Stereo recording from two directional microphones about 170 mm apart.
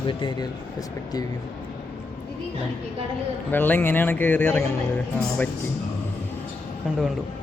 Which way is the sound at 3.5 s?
10° left (ahead or behind).